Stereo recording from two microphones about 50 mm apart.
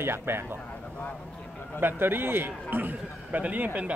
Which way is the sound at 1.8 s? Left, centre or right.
Right.